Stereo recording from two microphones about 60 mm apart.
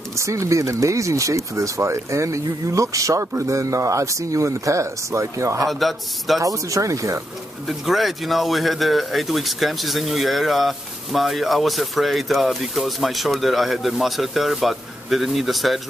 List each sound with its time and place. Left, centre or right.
0.3 s speech: right
5.7 s speech: centre
6.4 s speech: right
7.8 s speech: centre